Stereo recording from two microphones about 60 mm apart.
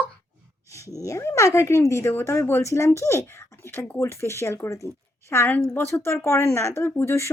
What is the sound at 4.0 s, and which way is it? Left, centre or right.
Speech, left.